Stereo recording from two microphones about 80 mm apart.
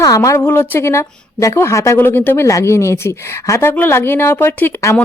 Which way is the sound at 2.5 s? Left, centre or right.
Left.